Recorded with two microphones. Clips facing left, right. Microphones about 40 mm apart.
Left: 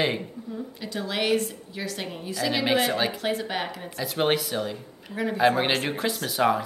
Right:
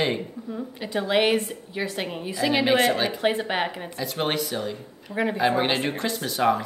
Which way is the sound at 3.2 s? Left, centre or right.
Right.